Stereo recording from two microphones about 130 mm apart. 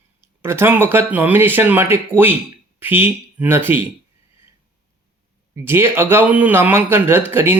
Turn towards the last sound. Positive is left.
turn(degrees=-15)  # may be behind; listen again after turning